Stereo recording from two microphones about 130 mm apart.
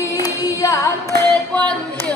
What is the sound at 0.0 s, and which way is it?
Female singing, 25° left (ahead or behind).